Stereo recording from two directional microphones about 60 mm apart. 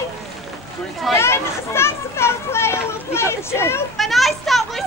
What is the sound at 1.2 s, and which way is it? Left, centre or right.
Children playing, left.